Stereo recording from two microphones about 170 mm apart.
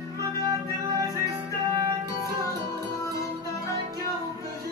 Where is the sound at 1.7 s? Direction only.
20° right (ahead or behind).